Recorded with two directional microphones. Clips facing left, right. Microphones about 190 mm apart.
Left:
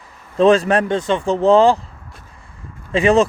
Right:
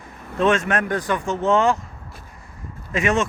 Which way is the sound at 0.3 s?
35° left (ahead or behind).